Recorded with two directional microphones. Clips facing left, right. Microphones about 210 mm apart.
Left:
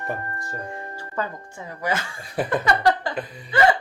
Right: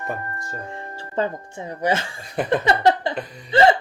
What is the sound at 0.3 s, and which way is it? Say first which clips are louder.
Speech: even; 20° right (ahead or behind).